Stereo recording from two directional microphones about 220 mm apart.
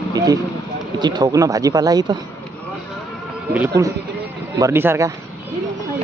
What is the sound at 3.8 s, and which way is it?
Speech, 15° right (ahead or behind).